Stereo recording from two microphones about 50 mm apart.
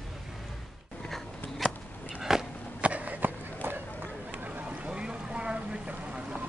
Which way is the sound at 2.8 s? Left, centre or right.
Right.